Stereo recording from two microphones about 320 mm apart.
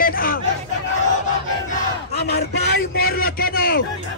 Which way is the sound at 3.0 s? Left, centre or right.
Left.